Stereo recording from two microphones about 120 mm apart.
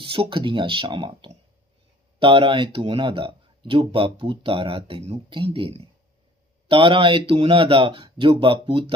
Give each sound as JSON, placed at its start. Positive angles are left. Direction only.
{"t": 0.0, "sound": "speech", "side_deg": -45}